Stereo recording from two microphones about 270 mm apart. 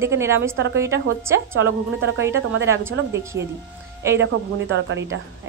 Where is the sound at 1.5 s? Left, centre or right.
Right.